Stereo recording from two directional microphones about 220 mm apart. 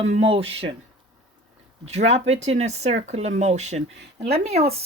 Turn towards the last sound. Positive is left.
turn(degrees=-30)  # may be behind; listen again after turning